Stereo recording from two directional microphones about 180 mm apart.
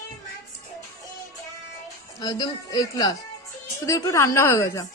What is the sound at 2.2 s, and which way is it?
A woman's voice, 25° left (ahead or behind).